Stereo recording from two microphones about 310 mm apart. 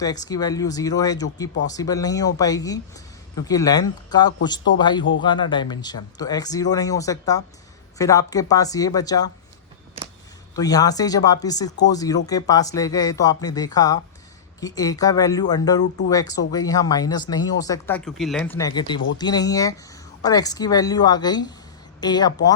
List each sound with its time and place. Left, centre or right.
0.0 s speech: centre
10.5 s speech: centre